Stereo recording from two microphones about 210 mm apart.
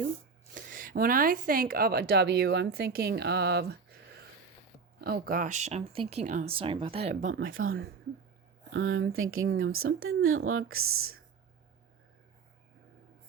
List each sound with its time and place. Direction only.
0.5 s speech: 40° right (ahead or behind)
4.9 s speech: 50° right (ahead or behind); by 7.2 s 30° right (ahead or behind)
7.2 s speech: 65° right (ahead or behind)
8.7 s speech: 65° right (ahead or behind); by 11.2 s 85° right